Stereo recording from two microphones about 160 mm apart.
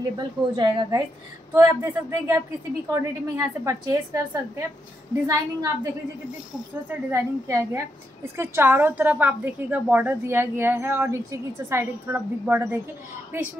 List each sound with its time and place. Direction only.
0.0 s a woman's voice: 25° right (ahead or behind)
1.5 s a woman's voice: 15° right (ahead or behind)
7.1 s a woman's voice: 20° right (ahead or behind)